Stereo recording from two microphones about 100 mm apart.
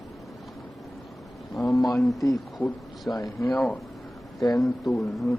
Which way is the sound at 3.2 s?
35° left (ahead or behind).